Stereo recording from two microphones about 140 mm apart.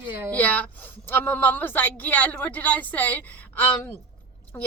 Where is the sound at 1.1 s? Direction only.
15° left (ahead or behind).